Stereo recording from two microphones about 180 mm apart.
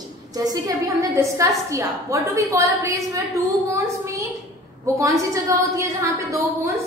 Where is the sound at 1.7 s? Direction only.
15° right (ahead or behind).